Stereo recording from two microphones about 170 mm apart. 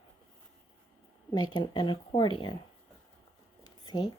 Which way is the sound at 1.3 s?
25° left (ahead or behind).